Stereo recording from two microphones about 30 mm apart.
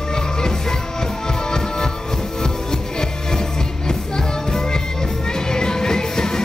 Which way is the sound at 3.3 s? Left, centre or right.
Left.